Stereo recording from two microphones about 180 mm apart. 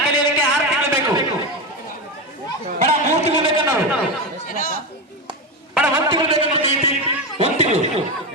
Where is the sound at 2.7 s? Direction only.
40° right (ahead or behind).